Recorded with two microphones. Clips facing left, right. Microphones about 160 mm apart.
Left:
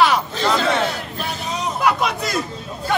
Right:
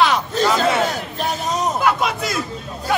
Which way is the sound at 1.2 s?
45° right (ahead or behind).